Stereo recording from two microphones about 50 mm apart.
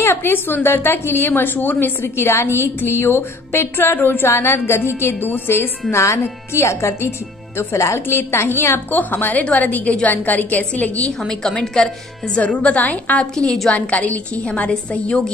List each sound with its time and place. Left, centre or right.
0.0 s a woman's voice: left
6.5 s speech: left
8.1 s a woman's voice: left
11.1 s a woman's voice: centre
12.4 s a woman's voice: left
13.2 s a woman's voice: centre
13.7 s a woman's voice: left